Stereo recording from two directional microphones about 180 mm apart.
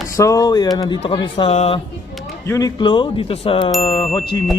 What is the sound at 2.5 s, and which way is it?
Speech, 20° left (ahead or behind).